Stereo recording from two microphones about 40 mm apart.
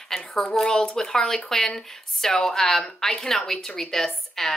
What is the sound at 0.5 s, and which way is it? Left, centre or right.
Speech, centre.